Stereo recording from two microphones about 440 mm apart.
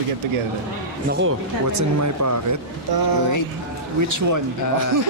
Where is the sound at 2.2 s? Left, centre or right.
Right.